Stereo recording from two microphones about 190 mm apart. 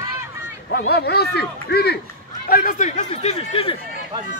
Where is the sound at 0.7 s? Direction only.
60° left (ahead or behind); by 3.8 s 30° left (ahead or behind).